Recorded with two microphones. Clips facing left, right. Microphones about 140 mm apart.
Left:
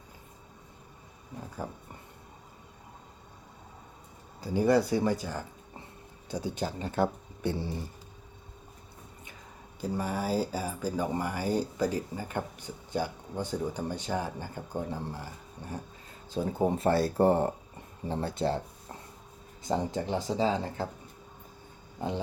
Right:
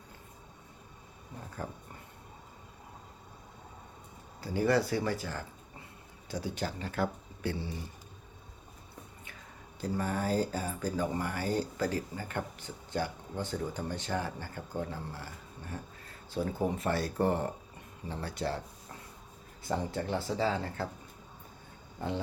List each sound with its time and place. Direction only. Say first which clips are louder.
4.4 s speech: left 4 dB; 15° left (ahead or behind)
9.8 s speech: left 1 dB; 10° left (ahead or behind)
19.6 s speech: left 3 dB; 20° left (ahead or behind)
22.0 s speech: left 2 dB; 15° left (ahead or behind)